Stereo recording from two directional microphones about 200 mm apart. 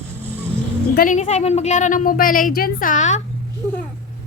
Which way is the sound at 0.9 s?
40° left (ahead or behind).